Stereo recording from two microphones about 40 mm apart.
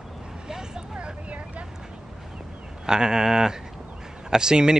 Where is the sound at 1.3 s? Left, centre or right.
Right.